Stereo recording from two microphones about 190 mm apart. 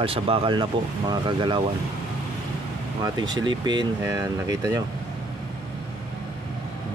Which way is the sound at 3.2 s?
20° right (ahead or behind).